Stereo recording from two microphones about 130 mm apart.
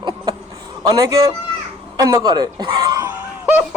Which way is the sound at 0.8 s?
25° right (ahead or behind).